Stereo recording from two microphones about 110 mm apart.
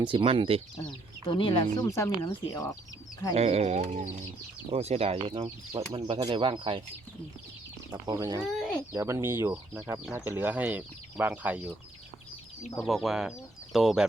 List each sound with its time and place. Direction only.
0.0 s speech: 50° right (ahead or behind)
0.9 s speech: 45° left (ahead or behind)
1.8 s speech: 30° left (ahead or behind)
3.3 s speech: 70° right (ahead or behind); by 4.2 s 90° right
4.7 s speech: 70° right (ahead or behind); by 6.8 s 50° right (ahead or behind)
7.9 s speech: 35° right (ahead or behind)
8.4 s speech: 5° right (ahead or behind)
8.9 s speech: 30° right (ahead or behind); by 11.7 s 15° right (ahead or behind)
12.7 s speech: centre (ahead or behind)